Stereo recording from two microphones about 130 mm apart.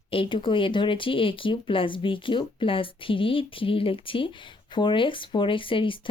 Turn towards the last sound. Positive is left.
turn(degrees=40)  # may be behind; listen again after turning